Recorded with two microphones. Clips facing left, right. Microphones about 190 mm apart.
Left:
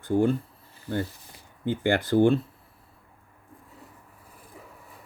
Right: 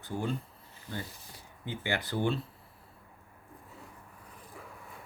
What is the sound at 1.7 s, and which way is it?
Speech, 50° left (ahead or behind).